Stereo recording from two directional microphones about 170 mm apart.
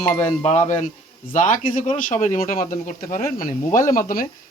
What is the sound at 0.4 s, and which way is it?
Speech, 45° left (ahead or behind).